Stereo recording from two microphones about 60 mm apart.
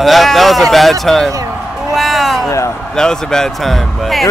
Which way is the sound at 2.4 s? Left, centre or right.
Left.